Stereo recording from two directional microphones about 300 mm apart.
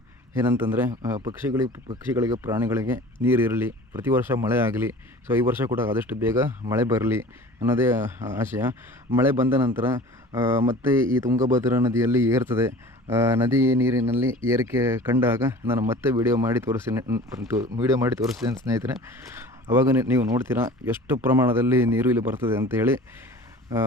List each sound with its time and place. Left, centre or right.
0.4 s speech: centre
11.3 s speech: right
11.6 s speech: centre